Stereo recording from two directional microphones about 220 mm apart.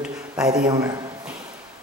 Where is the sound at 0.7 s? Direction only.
15° right (ahead or behind).